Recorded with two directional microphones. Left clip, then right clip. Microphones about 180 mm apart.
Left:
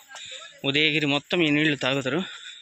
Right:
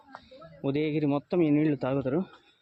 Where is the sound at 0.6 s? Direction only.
Centre (ahead or behind).